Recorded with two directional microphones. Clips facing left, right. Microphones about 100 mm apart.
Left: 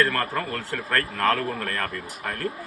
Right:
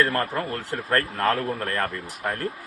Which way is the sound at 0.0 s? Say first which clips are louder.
Right 1 dB; 30° right (ahead or behind).